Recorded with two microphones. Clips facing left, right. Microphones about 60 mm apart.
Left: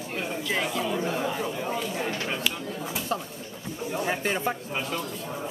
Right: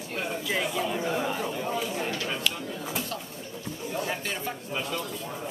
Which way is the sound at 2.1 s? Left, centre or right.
Left.